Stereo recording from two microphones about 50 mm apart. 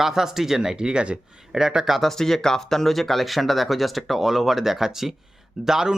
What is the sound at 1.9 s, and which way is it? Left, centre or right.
Speech, centre.